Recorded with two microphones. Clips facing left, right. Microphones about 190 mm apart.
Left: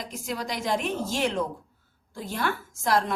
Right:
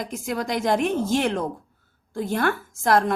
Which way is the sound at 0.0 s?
50° right (ahead or behind).